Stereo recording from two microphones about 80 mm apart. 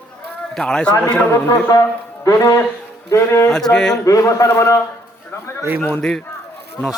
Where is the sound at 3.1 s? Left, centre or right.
Left.